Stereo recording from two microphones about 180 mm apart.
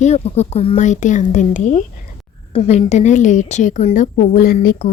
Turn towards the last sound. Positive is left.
turn(degrees=55)  # may be behind; listen again after turning